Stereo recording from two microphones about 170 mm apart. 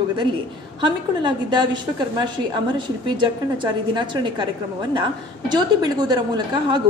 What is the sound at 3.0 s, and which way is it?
A woman's voice, 25° right (ahead or behind).